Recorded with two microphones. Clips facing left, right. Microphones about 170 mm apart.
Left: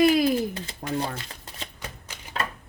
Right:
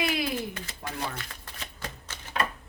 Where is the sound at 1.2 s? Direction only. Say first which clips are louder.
Left 2 dB; 25° left (ahead or behind).